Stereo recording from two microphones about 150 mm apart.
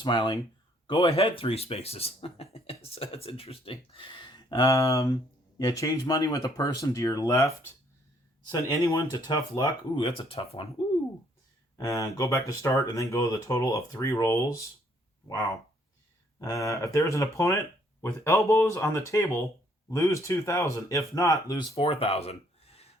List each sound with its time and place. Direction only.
0.0 s speech: 30° left (ahead or behind)
11.8 s speech: 20° left (ahead or behind)
16.4 s speech: 20° left (ahead or behind)
21.8 s speech: 40° left (ahead or behind)